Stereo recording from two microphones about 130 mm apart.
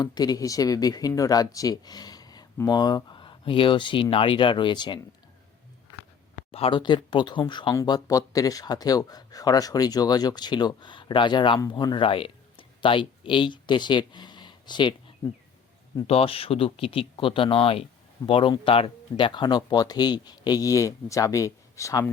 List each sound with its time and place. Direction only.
0.0 s speech: 30° left (ahead or behind)
6.5 s speech: 45° left (ahead or behind)
16.0 s speech: 50° left (ahead or behind); by 22.0 s 25° left (ahead or behind)